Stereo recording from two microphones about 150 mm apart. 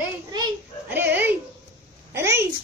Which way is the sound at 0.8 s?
15° right (ahead or behind).